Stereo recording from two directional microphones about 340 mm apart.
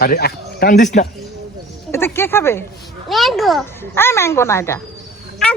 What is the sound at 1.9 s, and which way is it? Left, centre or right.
A child's voice, centre.